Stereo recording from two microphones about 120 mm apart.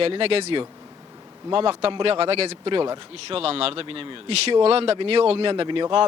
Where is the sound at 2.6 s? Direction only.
40° right (ahead or behind).